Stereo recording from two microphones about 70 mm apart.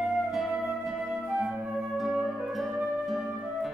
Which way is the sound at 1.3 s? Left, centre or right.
Centre.